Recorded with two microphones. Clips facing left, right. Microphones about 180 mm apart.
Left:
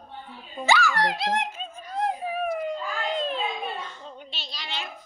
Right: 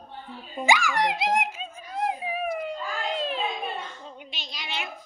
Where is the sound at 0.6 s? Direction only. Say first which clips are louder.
Even; 15° right (ahead or behind).